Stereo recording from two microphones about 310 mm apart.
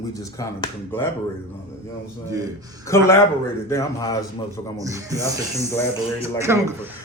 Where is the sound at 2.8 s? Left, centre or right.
Centre.